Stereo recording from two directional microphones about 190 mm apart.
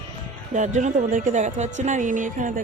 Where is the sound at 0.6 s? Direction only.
40° right (ahead or behind).